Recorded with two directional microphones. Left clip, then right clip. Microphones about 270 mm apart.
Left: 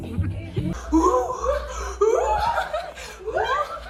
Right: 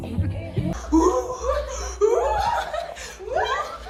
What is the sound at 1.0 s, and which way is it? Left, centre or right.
Laughter, centre.